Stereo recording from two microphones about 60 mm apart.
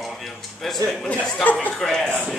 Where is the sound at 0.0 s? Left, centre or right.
Centre.